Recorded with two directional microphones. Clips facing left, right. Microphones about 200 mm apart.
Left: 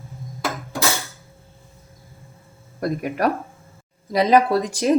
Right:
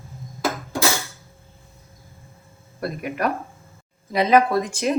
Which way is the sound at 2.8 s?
40° left (ahead or behind).